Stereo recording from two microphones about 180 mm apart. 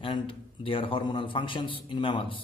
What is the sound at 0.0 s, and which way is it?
A man's voice, 30° left (ahead or behind).